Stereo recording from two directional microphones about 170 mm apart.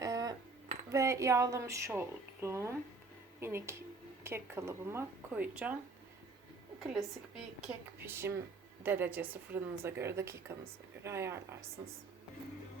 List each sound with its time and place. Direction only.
0.0 s cutlery: 20° right (ahead or behind)
0.9 s a woman's voice: 20° right (ahead or behind)
6.7 s a woman's voice: centre (ahead or behind)